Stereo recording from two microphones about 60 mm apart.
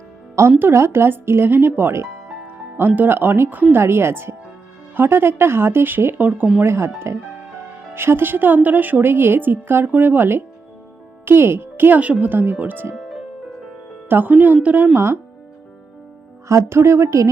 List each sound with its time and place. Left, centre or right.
0.6 s a woman's voice: right
2.7 s a woman's voice: right
3.8 s a woman's voice: right
6.6 s a woman's voice: right
13.0 s music: centre
14.1 s a woman's voice: right
14.9 s speech: right
16.5 s speech: right